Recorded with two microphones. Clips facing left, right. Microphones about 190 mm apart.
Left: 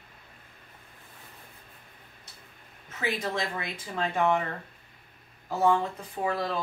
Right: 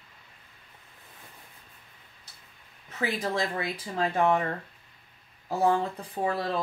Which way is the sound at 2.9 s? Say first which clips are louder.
Right 2 dB; 35° right (ahead or behind).